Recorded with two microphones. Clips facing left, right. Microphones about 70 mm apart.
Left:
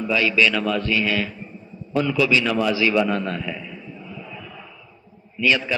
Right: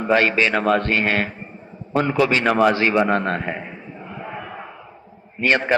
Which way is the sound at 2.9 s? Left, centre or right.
Right.